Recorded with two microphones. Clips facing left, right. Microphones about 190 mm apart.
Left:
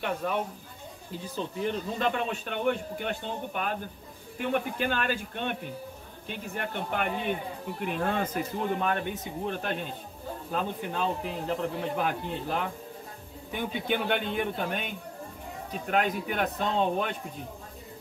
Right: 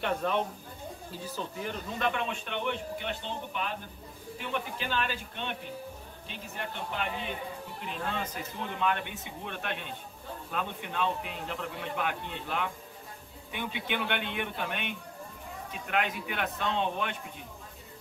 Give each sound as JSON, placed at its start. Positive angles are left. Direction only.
{"t": 0.0, "sound": "speech", "side_deg": 10}
{"t": 1.3, "sound": "speech", "side_deg": 30}